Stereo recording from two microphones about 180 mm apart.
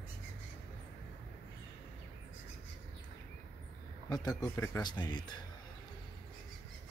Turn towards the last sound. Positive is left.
turn(degrees=25)  # may be behind; listen again after turning